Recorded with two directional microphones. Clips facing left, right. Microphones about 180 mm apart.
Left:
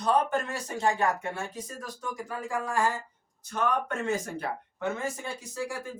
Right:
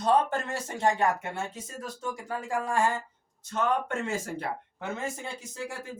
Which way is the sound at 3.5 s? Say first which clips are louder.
Right 1 dB; 25° right (ahead or behind).